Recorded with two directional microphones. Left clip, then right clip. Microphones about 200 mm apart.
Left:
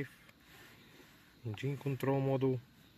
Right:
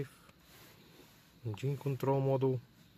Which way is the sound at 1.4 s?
10° right (ahead or behind).